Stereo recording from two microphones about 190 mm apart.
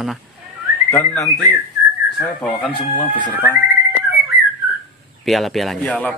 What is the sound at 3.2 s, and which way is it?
Speech, 10° left (ahead or behind).